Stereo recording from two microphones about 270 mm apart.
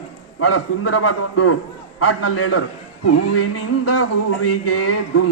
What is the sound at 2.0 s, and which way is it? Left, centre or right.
Speech, left.